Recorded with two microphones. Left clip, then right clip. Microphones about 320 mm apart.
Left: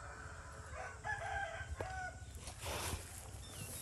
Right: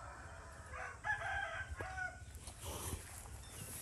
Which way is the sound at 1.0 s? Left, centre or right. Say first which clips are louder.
Right 2 dB; left.